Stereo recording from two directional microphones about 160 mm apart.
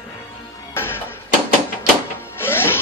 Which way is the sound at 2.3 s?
15° left (ahead or behind).